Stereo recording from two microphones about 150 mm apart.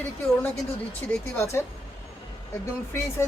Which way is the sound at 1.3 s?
15° left (ahead or behind).